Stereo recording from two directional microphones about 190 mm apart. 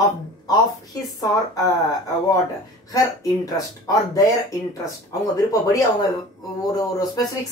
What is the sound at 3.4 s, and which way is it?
Speech, 20° left (ahead or behind).